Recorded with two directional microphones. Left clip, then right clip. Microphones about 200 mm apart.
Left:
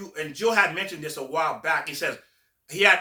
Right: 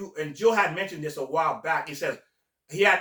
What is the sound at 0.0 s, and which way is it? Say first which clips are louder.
Speech: right 2 dB; 15° left (ahead or behind).